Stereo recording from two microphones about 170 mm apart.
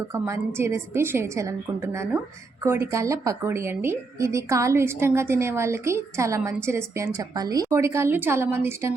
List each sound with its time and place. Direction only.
0.1 s a woman's voice: 15° right (ahead or behind)